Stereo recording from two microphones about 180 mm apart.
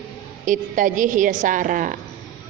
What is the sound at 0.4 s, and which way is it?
A woman's voice, 45° right (ahead or behind).